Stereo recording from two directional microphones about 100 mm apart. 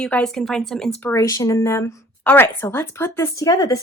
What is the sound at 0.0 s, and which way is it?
Speech, 10° left (ahead or behind).